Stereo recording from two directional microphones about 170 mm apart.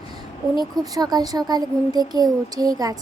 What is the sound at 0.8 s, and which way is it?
A woman's voice, 20° right (ahead or behind).